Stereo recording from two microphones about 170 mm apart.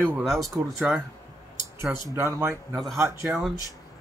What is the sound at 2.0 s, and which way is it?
Speech, 15° right (ahead or behind).